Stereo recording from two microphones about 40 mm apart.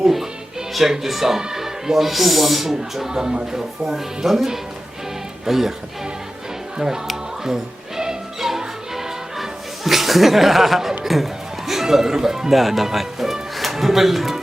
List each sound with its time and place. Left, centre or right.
0.0 s speech: centre
6.7 s speech: centre
7.4 s music: centre
11.0 s speech: centre